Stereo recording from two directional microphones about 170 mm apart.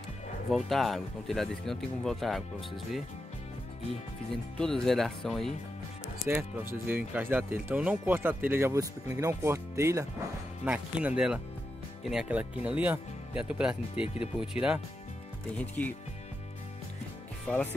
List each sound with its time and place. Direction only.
0.5 s speech: centre (ahead or behind)
4.6 s speech: 5° left (ahead or behind)
6.2 s speech: 15° right (ahead or behind)
15.5 s speech: 10° left (ahead or behind)
17.5 s speech: 10° left (ahead or behind)